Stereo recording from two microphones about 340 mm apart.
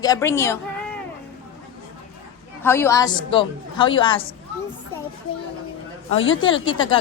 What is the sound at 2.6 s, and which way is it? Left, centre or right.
A woman's voice, centre.